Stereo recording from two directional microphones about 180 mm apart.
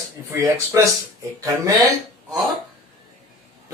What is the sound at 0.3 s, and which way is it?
Speech, 15° right (ahead or behind).